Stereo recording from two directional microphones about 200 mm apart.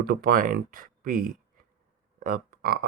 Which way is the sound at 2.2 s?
45° right (ahead or behind).